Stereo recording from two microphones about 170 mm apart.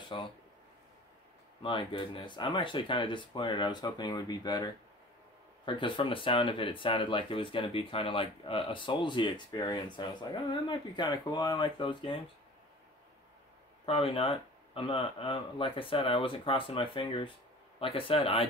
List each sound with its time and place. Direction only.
0.0 s speech: 30° left (ahead or behind)
1.6 s speech: 30° left (ahead or behind)
5.7 s speech: 30° left (ahead or behind)
13.8 s speech: 35° left (ahead or behind)